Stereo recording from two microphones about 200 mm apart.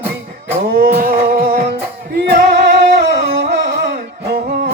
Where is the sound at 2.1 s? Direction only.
50° right (ahead or behind).